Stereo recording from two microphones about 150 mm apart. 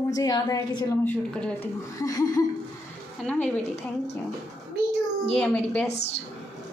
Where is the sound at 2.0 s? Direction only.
25° left (ahead or behind).